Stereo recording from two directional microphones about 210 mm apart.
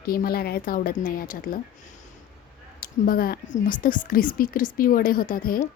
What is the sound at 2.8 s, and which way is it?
Speech, 45° left (ahead or behind).